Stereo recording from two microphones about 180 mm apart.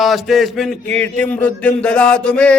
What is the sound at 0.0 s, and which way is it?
A man's voice, centre (ahead or behind).